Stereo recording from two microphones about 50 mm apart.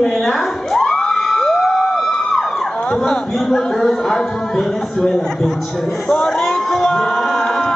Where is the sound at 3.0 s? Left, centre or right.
Centre.